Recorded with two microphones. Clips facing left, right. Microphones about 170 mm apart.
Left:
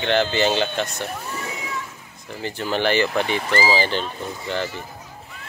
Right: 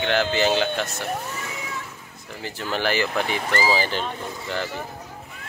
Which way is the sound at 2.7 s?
5° right (ahead or behind).